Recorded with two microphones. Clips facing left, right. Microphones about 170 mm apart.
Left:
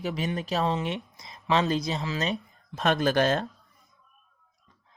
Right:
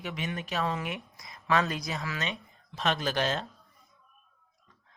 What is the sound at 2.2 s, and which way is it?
Speech, 45° left (ahead or behind).